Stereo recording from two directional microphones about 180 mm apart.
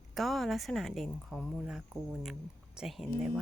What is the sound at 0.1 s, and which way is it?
Speech, centre (ahead or behind).